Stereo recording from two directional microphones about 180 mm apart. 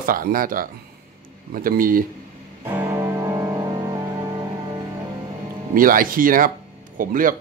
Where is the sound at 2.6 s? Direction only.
15° right (ahead or behind).